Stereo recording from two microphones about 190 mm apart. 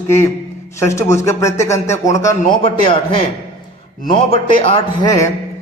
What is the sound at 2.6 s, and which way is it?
Speech, 25° left (ahead or behind).